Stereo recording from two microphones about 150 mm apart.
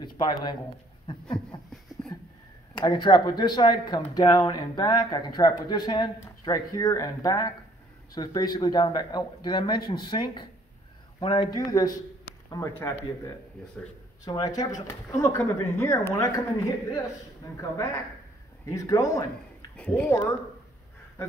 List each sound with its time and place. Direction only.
0.2 s speech: 30° left (ahead or behind)
2.7 s speech: 30° left (ahead or behind)
17.6 s speech: 20° left (ahead or behind)
19.8 s speech: 10° left (ahead or behind)